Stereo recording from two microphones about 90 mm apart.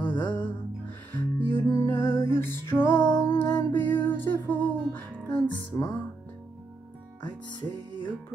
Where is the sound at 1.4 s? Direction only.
30° left (ahead or behind).